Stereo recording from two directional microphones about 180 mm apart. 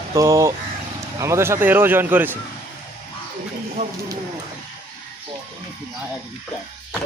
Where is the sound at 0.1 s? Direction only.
15° right (ahead or behind).